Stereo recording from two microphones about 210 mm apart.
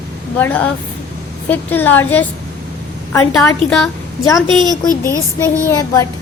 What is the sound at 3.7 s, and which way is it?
Speech, 5° left (ahead or behind).